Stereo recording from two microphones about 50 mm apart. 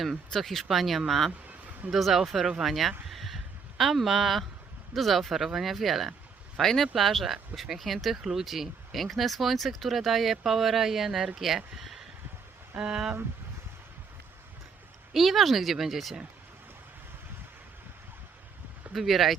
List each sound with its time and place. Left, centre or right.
0.3 s speech: centre
3.1 s a sound: centre
4.9 s speech: centre
12.8 s speech: centre
15.1 s speech: centre
18.9 s speech: centre